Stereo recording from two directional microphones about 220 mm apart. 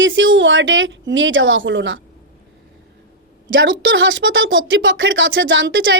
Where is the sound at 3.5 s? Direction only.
60° right (ahead or behind).